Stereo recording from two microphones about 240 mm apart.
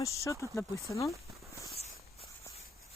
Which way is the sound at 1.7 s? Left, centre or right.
Left.